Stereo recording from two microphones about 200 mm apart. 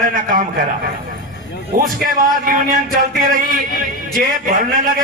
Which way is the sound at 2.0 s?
45° right (ahead or behind).